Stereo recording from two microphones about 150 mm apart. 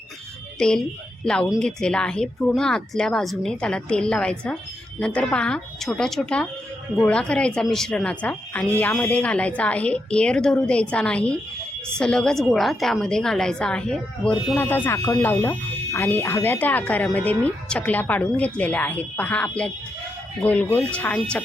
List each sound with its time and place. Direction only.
0.6 s a woman's voice: 5° left (ahead or behind)